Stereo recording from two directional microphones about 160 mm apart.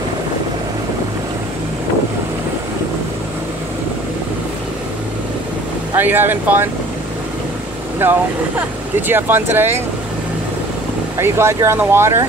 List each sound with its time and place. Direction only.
5.9 s speech: 15° right (ahead or behind)
8.0 s speech: 10° right (ahead or behind)
11.1 s speech: 15° right (ahead or behind)